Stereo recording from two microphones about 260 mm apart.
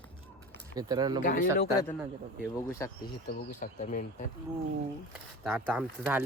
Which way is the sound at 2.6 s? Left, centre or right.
Centre.